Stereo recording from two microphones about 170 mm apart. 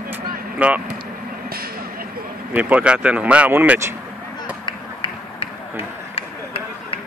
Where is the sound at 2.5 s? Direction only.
10° right (ahead or behind).